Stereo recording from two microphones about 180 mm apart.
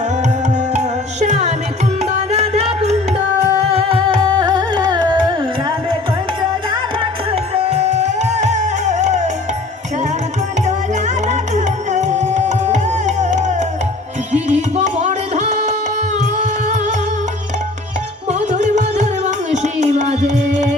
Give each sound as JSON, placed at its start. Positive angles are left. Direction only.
{"t": 0.7, "sound": "music", "side_deg": -40}
{"t": 7.5, "sound": "music", "side_deg": -35}
{"t": 11.3, "sound": "music", "side_deg": -40}
{"t": 18.3, "sound": "music", "side_deg": -40}